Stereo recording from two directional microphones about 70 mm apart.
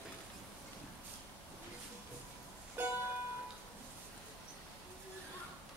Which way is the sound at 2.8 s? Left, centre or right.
Right.